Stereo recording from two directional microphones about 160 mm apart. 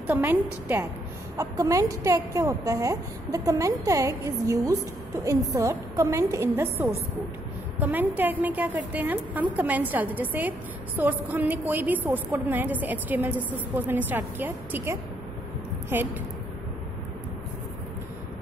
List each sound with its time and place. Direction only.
0.0 s a woman's voice: 15° right (ahead or behind)